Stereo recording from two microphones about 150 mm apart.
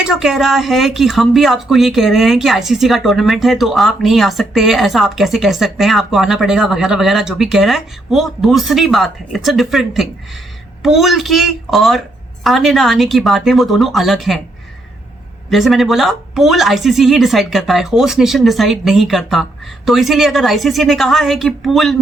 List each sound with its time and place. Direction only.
0.0 s speech: 5° right (ahead or behind)
15.4 s speech: centre (ahead or behind)